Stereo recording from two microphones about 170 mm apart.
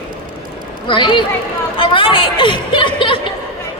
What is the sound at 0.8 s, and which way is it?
A woman's voice, 30° left (ahead or behind).